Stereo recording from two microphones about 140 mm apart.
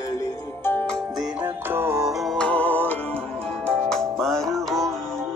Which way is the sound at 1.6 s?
15° right (ahead or behind).